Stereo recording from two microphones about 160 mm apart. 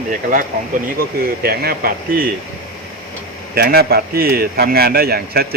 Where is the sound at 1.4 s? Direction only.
70° right (ahead or behind).